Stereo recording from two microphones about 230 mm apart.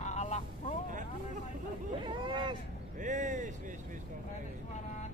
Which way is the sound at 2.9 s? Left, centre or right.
Right.